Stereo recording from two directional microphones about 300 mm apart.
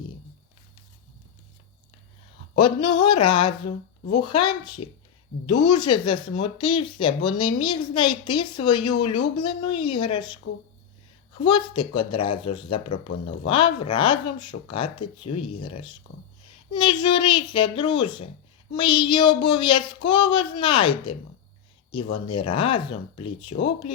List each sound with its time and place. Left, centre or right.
2.6 s a woman's voice: centre
11.4 s a woman's voice: centre
22.3 s a woman's voice: centre